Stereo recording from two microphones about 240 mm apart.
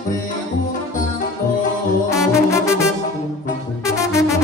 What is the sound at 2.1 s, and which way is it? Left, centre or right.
Brass instrument, centre.